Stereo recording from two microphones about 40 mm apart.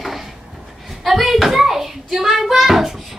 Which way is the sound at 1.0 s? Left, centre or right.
Centre.